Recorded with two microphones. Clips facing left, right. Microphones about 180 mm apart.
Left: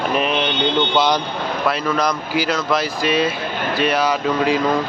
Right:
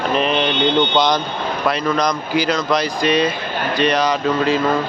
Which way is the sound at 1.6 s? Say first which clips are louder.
Right 2 dB; centre (ahead or behind).